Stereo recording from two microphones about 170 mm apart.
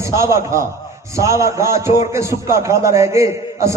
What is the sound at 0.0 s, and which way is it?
A man's voice, 15° right (ahead or behind).